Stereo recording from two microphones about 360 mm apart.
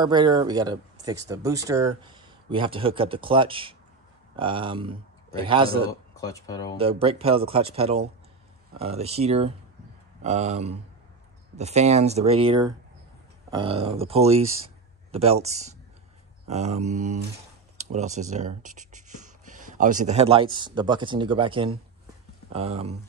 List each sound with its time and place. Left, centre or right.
0.0 s speech: centre
5.9 s speech: centre
6.8 s a man's voice: centre